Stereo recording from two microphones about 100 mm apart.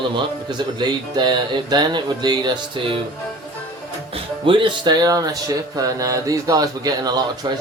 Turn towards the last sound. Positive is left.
turn(degrees=-40)  # may be behind; listen again after turning